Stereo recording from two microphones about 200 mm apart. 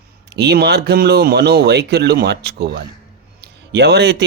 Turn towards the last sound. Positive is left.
turn(degrees=-55)  # may be behind; listen again after turning